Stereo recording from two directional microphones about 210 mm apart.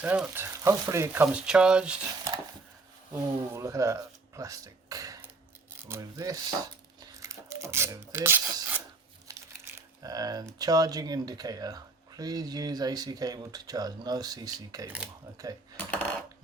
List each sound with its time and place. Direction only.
0.0 s speech: 5° right (ahead or behind)
3.1 s speech: 15° right (ahead or behind)
7.0 s filing: 15° right (ahead or behind)
9.2 s speech: 15° right (ahead or behind)
15.8 s cutlery: 5° left (ahead or behind)